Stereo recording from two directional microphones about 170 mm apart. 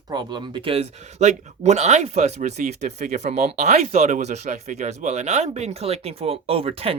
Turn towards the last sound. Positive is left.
turn(degrees=-35)  # may be behind; listen again after turning